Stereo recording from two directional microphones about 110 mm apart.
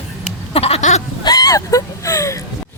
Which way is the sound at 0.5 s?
65° left (ahead or behind).